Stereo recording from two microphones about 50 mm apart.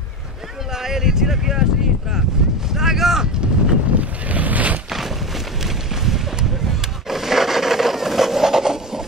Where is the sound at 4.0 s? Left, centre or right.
Right.